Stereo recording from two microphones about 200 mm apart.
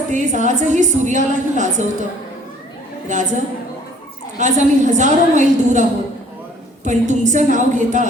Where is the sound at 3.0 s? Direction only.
35° right (ahead or behind).